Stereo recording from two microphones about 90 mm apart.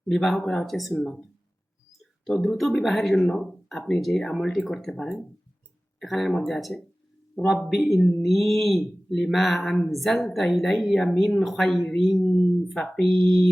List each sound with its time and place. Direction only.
0.1 s speech: 5° left (ahead or behind)
2.2 s a man's voice: 5° left (ahead or behind)